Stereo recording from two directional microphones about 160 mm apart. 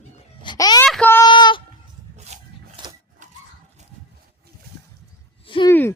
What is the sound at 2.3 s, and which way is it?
Wood, 45° right (ahead or behind).